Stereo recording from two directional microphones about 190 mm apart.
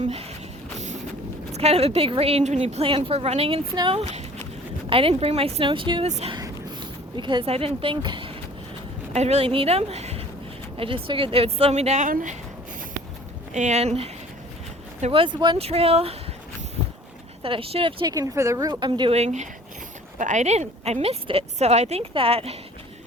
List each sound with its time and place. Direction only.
0.0 s a sound: 35° right (ahead or behind)
1.5 s a woman's voice: 35° right (ahead or behind)
6.3 s a sound: 20° right (ahead or behind)
7.2 s a woman's voice: 25° right (ahead or behind); by 12.4 s 45° right (ahead or behind)
13.5 s a woman's voice: 40° right (ahead or behind)
17.4 s a woman's voice: 30° right (ahead or behind)